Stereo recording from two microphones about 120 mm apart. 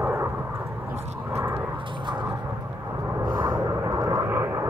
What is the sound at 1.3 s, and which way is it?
Vehicle, 15° right (ahead or behind).